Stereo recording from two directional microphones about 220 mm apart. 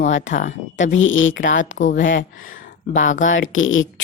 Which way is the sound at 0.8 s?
60° left (ahead or behind).